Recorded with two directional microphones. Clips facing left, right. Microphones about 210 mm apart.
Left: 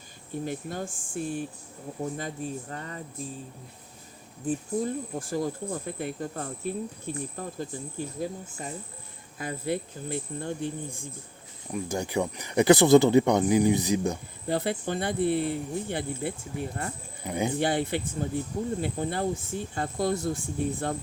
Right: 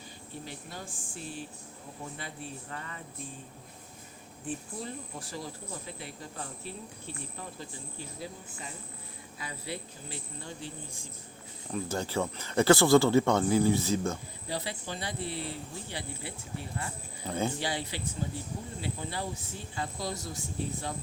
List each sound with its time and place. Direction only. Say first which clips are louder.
0.4 s speech: left 12 dB; 50° left (ahead or behind)
4.4 s speech: left 10 dB; 45° left (ahead or behind)
11.7 s speech: left 3 dB; 15° left (ahead or behind)
14.4 s speech: left 9 dB; 55° left (ahead or behind)
17.2 s speech: left 3 dB; 15° left (ahead or behind)
17.6 s speech: left 8 dB; 55° left (ahead or behind)